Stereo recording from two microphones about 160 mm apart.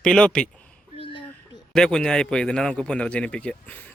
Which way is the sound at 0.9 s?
35° left (ahead or behind).